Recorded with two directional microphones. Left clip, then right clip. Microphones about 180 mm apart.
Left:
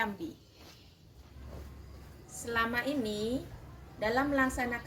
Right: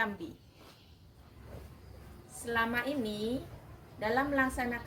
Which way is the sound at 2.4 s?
Centre (ahead or behind).